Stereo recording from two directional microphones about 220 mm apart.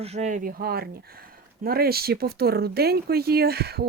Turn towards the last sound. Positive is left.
turn(degrees=-45)  # may be behind; listen again after turning